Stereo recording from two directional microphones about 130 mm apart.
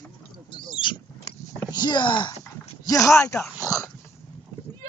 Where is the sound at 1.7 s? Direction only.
35° left (ahead or behind).